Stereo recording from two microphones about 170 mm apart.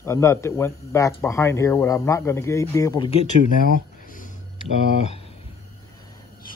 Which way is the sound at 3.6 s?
55° left (ahead or behind).